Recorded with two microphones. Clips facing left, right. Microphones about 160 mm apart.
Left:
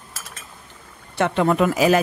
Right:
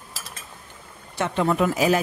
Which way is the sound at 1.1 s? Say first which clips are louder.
Left 4 dB; 65° left (ahead or behind).